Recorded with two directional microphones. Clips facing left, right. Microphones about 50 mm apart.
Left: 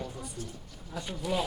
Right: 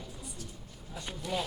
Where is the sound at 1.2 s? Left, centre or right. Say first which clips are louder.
Left 4 dB; centre.